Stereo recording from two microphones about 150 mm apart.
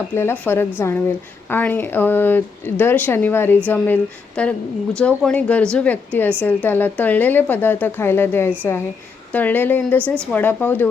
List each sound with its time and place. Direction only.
0.1 s speech: 15° left (ahead or behind)